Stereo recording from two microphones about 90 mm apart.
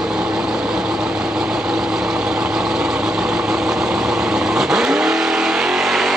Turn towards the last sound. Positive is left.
turn(degrees=-5)  # may be behind; listen again after turning